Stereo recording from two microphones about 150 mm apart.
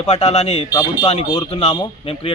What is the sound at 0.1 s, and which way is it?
A man's voice, 45° left (ahead or behind).